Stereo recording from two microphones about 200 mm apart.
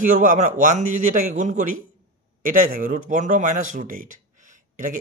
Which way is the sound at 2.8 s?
40° right (ahead or behind).